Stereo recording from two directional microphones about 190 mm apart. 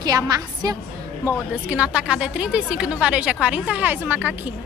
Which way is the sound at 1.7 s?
5° right (ahead or behind).